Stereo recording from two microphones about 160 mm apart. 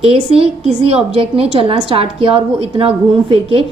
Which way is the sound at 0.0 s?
35° right (ahead or behind).